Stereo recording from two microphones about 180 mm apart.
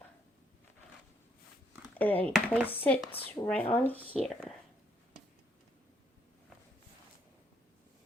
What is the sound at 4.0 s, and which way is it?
Speech, 35° right (ahead or behind).